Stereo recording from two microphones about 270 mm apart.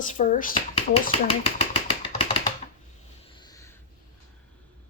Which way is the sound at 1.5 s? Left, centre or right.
Centre.